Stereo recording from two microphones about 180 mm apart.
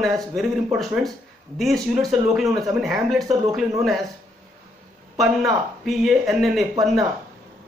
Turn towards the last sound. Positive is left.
turn(degrees=0)  # may be behind; listen again after turning